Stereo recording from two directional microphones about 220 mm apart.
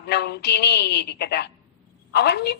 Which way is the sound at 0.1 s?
50° left (ahead or behind).